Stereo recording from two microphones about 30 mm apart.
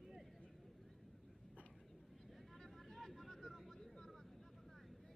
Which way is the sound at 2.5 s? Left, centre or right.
Centre.